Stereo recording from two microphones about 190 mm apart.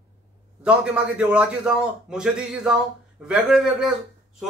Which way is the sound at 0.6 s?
5° right (ahead or behind).